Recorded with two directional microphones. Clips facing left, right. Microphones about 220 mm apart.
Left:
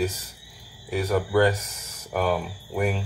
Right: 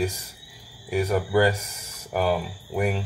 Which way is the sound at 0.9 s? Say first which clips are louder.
Even; 10° right (ahead or behind).